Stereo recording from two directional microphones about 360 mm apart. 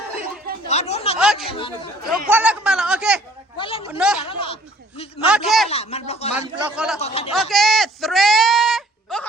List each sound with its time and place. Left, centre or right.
0.7 s speech: centre
1.2 s a man's voice: centre
1.5 s speech: centre
2.3 s a man's voice: centre
3.6 s speech: centre
3.9 s a man's voice: centre
4.2 s speech: centre
5.2 s a man's voice: centre
5.6 s speech: centre
6.3 s a man's voice: centre
7.0 s speech: centre
7.3 s a sound: centre